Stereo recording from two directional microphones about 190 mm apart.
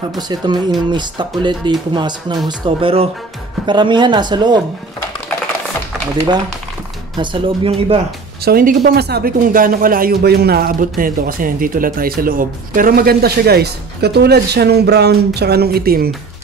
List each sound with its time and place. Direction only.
0.3 s speech: 25° right (ahead or behind)
7.2 s speech: 30° right (ahead or behind)
8.5 s speech: 50° right (ahead or behind)